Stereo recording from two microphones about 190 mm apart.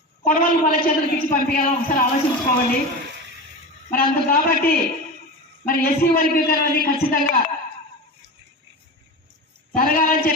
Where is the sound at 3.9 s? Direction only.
50° left (ahead or behind).